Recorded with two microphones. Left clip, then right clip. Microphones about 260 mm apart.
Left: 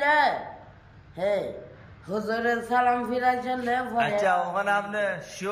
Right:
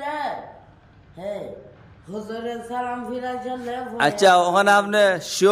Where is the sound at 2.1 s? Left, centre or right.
Centre.